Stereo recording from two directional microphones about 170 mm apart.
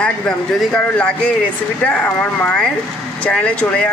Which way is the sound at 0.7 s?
5° left (ahead or behind).